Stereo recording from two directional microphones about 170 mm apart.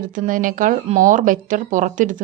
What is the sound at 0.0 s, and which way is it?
Speech, 50° right (ahead or behind).